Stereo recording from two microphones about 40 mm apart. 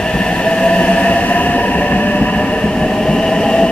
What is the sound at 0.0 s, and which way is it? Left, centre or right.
Train, left.